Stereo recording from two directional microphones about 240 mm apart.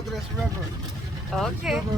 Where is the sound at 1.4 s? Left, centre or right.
Centre.